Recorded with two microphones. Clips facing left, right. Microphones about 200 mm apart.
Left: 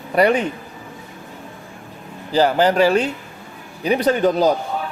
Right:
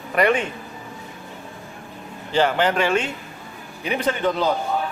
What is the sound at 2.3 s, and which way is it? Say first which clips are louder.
A woman's voice: left 4 dB; 35° left (ahead or behind).